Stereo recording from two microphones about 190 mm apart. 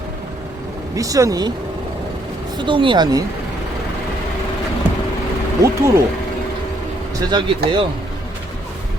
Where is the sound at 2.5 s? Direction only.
25° right (ahead or behind).